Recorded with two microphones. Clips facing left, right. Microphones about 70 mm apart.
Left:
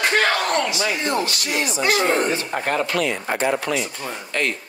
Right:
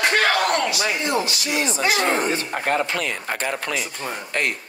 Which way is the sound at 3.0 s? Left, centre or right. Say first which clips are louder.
Left 4 dB; left.